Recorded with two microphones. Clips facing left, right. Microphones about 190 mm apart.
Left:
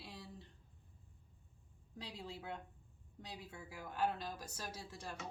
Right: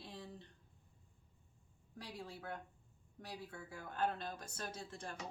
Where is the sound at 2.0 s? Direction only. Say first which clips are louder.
Even; 20° left (ahead or behind).